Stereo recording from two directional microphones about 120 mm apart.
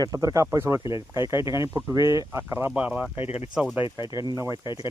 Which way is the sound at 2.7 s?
10° right (ahead or behind).